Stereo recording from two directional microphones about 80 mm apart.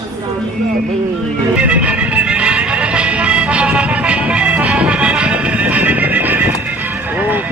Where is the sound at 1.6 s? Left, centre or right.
Centre.